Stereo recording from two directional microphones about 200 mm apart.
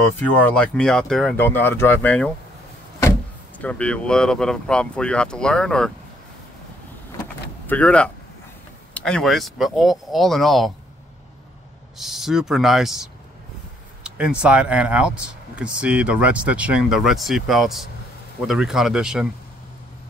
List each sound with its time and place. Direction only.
0.4 s speech: 5° left (ahead or behind)
7.6 s speech: 5° left (ahead or behind)
12.0 s speech: centre (ahead or behind)